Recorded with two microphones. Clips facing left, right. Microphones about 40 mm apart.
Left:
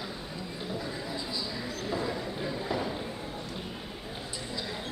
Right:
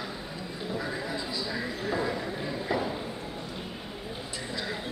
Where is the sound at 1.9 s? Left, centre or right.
Centre.